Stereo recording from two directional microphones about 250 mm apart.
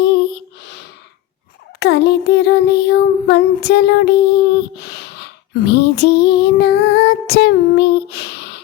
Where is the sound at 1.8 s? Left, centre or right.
Left.